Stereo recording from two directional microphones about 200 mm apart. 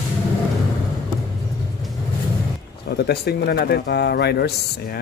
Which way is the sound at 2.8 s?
55° left (ahead or behind).